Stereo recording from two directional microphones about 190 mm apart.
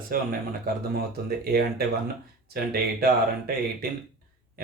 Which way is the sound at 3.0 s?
50° right (ahead or behind).